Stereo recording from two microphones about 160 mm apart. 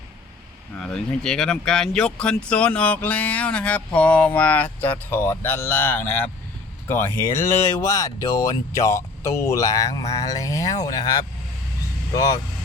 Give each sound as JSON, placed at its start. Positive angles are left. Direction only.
{"t": 0.8, "sound": "speech", "side_deg": 5}